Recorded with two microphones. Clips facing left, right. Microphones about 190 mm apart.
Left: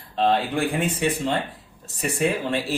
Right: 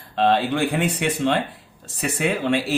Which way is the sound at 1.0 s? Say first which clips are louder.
Right 2 dB; 75° right (ahead or behind).